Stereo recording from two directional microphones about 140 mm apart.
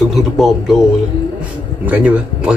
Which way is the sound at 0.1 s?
Centre (ahead or behind).